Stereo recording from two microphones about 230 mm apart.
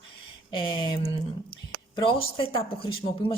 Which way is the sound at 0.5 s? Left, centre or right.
Left.